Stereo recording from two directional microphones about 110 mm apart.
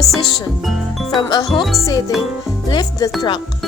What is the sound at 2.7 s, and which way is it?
Speech, 40° left (ahead or behind).